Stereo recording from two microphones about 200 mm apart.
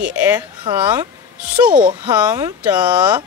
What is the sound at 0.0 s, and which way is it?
Speech, 10° right (ahead or behind).